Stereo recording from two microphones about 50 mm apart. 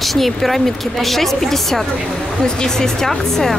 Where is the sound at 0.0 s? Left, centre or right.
Centre.